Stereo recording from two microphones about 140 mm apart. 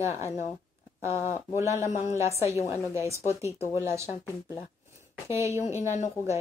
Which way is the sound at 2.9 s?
20° right (ahead or behind).